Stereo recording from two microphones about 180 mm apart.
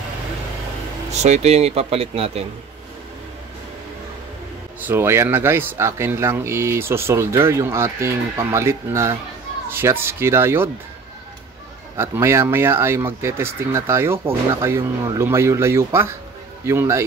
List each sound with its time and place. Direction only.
1.2 s speech: 40° right (ahead or behind)
4.7 s speech: 10° right (ahead or behind)
12.0 s speech: 15° right (ahead or behind)